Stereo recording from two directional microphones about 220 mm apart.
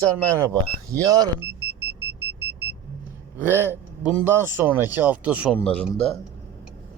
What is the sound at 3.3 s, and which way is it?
Speech, 10° right (ahead or behind).